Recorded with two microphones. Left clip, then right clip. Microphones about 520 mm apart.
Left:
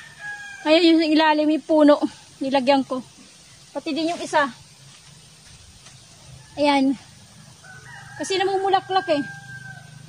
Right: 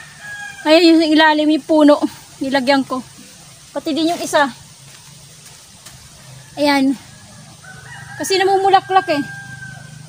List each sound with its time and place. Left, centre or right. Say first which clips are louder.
0.7 s a woman's voice: right 6 dB; left
6.5 s a woman's voice: right 4 dB; left
8.2 s a woman's voice: right 8 dB; left